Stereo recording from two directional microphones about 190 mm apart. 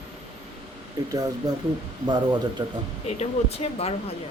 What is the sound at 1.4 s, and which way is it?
Speech, 20° right (ahead or behind).